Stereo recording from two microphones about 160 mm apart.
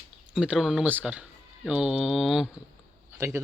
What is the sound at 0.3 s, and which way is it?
Speech, 5° right (ahead or behind).